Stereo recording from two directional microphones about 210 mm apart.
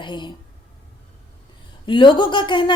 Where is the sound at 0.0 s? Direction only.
20° left (ahead or behind).